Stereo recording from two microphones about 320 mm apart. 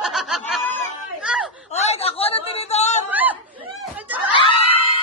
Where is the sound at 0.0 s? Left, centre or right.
Centre.